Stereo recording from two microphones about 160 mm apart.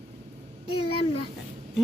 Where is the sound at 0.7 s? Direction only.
35° left (ahead or behind).